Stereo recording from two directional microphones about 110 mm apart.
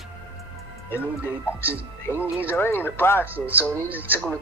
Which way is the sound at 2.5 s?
20° left (ahead or behind).